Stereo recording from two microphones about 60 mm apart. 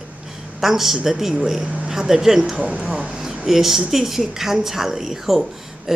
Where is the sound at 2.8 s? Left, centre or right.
Centre.